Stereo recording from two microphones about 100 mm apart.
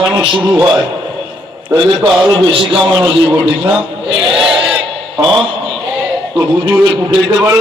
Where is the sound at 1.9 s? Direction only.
5° right (ahead or behind).